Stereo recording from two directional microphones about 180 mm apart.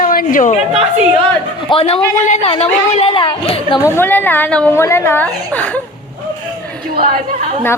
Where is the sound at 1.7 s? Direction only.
30° left (ahead or behind).